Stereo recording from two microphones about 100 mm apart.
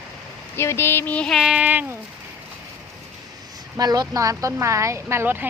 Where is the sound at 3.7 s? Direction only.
40° right (ahead or behind); by 5.4 s 25° right (ahead or behind).